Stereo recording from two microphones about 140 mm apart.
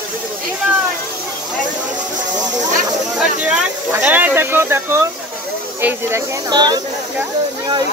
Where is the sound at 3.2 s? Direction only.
5° right (ahead or behind).